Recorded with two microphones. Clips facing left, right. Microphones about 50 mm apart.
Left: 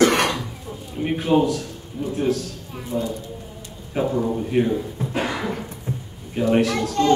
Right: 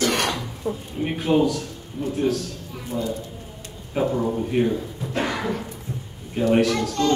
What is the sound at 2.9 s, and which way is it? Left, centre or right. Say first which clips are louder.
Speech: left 2 dB; centre.